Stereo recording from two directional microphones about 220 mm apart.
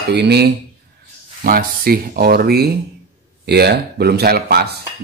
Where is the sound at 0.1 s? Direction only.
50° right (ahead or behind).